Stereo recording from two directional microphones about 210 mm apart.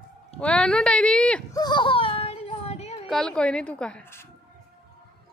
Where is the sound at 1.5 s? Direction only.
20° left (ahead or behind).